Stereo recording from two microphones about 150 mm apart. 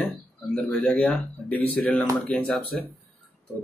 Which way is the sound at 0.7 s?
10° left (ahead or behind).